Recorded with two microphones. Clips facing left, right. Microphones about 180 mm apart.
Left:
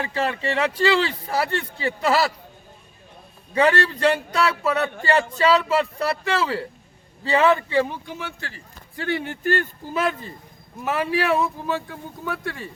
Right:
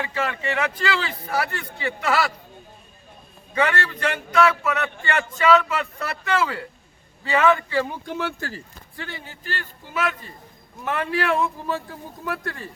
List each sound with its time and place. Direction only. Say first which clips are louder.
0.0 s a man's voice: left 2 dB; 35° left (ahead or behind)
3.5 s a man's voice: left 4 dB; 35° left (ahead or behind)
8.0 s speech: right 6 dB; 55° right (ahead or behind)
9.0 s speech: left 14 dB; 70° left (ahead or behind); by 9.9 s 50° left (ahead or behind)
9.9 s a man's voice: left 2 dB; 30° left (ahead or behind)
10.8 s speech: left 2 dB; 10° left (ahead or behind)